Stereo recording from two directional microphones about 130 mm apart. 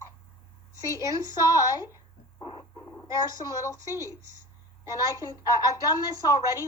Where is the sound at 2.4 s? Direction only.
40° left (ahead or behind).